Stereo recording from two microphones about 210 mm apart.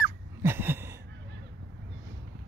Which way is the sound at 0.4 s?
10° right (ahead or behind).